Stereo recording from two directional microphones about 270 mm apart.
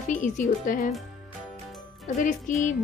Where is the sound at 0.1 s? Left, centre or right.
Left.